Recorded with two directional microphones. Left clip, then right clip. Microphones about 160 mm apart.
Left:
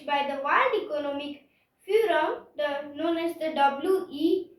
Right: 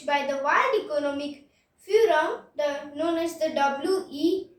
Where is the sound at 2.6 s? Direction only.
30° right (ahead or behind).